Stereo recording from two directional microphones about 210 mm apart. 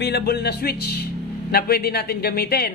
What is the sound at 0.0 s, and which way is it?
Speech, 50° left (ahead or behind).